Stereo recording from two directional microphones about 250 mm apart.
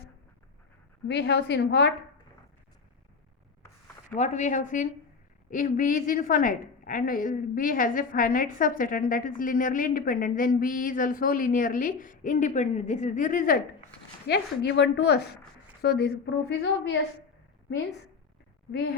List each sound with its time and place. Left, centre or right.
1.0 s a woman's voice: left
4.1 s a woman's voice: left
18.7 s a woman's voice: left